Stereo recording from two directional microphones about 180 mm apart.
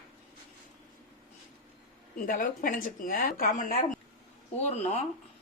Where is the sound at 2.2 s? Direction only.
50° left (ahead or behind).